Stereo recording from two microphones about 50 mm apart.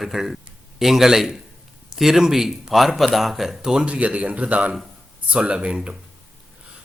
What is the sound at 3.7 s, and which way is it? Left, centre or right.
Speech, right.